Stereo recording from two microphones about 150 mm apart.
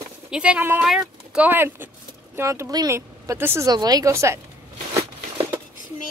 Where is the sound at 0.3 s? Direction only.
5° right (ahead or behind).